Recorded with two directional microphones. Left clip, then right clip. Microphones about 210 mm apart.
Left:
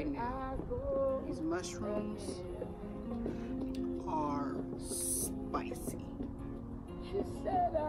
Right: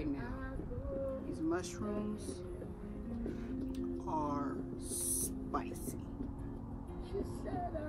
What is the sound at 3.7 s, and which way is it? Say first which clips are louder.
Music: left 2 dB; centre (ahead or behind).